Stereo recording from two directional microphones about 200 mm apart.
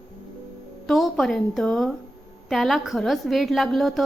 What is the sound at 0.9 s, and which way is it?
A woman's voice, centre (ahead or behind).